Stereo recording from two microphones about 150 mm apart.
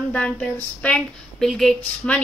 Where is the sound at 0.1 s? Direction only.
10° left (ahead or behind).